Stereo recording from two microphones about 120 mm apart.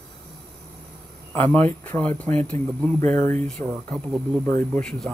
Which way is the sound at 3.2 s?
90° right.